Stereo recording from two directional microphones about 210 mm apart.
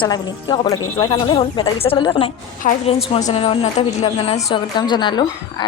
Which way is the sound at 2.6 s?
40° left (ahead or behind).